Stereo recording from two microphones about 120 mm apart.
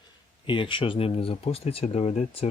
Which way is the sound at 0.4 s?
45° left (ahead or behind).